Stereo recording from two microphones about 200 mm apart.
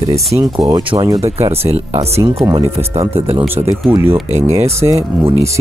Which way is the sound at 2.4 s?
15° right (ahead or behind).